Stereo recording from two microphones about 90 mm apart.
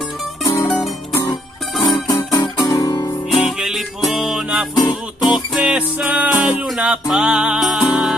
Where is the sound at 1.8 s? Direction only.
40° left (ahead or behind).